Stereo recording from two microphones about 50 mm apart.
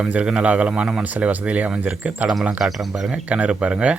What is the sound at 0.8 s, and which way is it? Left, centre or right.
Speech, centre.